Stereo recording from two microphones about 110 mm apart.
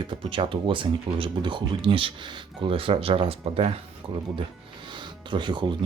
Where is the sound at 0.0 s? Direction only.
50° right (ahead or behind).